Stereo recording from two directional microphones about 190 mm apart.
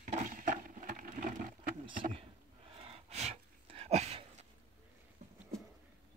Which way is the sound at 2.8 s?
30° right (ahead or behind).